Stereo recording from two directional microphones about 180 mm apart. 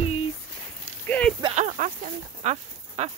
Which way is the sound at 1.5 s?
45° right (ahead or behind).